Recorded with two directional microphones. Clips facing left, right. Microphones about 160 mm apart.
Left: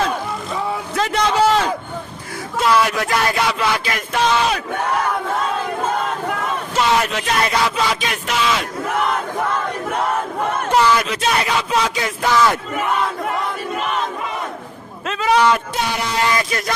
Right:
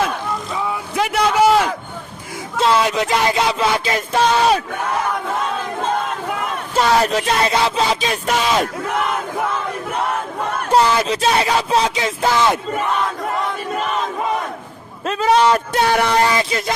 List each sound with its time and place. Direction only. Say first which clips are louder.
0.9 s a sound: right 1 dB; 10° right (ahead or behind)
2.6 s music: right 1 dB; 25° right (ahead or behind)
6.7 s speech: right 3 dB; 35° right (ahead or behind)
8.3 s speech: right 2 dB; 45° right (ahead or behind)
10.7 s speech: right 2 dB; 30° right (ahead or behind)
15.0 s a sound: right 3 dB; 40° right (ahead or behind)
15.9 s speech: right 7 dB; 60° right (ahead or behind)
16.3 s music: right 1 dB; 25° right (ahead or behind)